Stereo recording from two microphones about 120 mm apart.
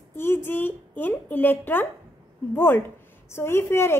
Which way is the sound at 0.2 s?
20° left (ahead or behind).